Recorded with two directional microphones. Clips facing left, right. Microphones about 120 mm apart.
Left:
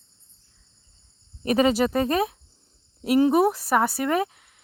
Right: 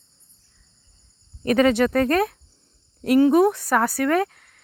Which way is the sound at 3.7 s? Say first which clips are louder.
Right 2 dB; 5° left (ahead or behind).